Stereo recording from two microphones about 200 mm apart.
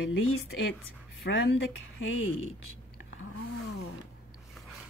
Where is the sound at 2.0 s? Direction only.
75° left (ahead or behind).